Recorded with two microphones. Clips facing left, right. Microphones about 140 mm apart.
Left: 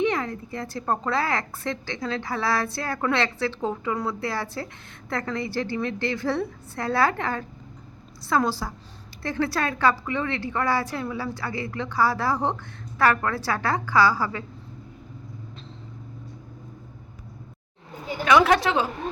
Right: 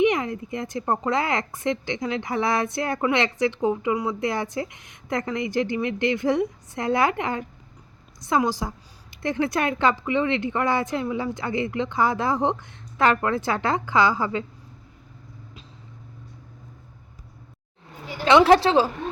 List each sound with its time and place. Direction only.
0.0 s a woman's voice: 20° right (ahead or behind)
18.3 s a woman's voice: 30° right (ahead or behind)